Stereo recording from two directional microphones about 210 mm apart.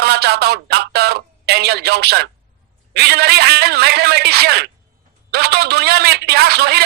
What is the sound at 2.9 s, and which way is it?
A man's voice, 50° right (ahead or behind).